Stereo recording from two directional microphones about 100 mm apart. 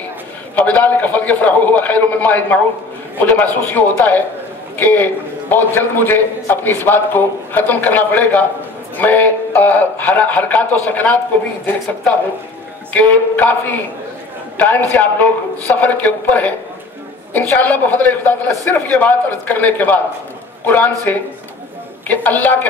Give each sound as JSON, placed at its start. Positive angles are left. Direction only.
{"t": 0.6, "sound": "a man's voice", "side_deg": 15}
{"t": 12.9, "sound": "a man's voice", "side_deg": 15}
{"t": 22.0, "sound": "a man's voice", "side_deg": 15}